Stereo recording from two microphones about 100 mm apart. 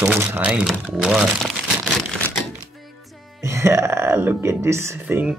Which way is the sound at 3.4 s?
30° right (ahead or behind).